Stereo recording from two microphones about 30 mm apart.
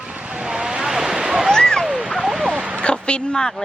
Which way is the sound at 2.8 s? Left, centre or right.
Left.